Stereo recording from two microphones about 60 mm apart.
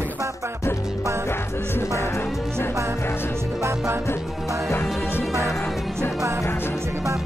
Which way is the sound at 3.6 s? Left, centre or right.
Right.